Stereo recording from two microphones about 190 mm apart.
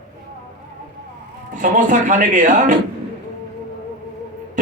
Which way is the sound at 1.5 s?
45° right (ahead or behind).